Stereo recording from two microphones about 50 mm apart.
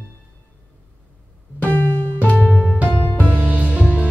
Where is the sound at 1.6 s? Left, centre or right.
Left.